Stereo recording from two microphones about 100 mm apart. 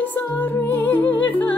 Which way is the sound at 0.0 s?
20° left (ahead or behind).